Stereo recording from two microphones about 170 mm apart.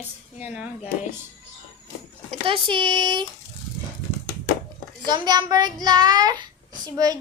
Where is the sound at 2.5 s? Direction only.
30° right (ahead or behind).